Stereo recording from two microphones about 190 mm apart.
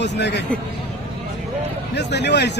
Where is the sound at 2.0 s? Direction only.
65° left (ahead or behind).